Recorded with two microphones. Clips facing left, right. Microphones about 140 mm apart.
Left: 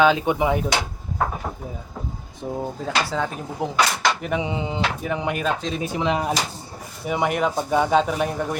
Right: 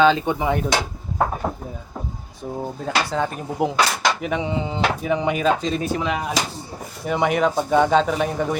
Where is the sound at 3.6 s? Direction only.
15° right (ahead or behind).